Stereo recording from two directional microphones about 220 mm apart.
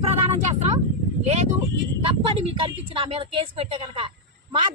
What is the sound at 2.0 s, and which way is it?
Speech, 25° right (ahead or behind).